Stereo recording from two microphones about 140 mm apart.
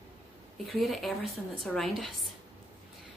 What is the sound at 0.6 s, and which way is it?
A woman's voice, centre (ahead or behind).